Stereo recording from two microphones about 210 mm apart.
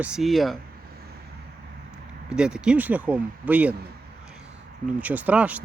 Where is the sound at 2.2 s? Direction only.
5° right (ahead or behind).